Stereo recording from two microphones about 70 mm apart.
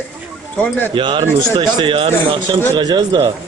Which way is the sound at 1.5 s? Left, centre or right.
Right.